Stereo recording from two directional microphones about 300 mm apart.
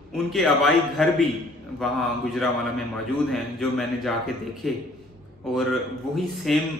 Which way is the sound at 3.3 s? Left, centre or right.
Centre.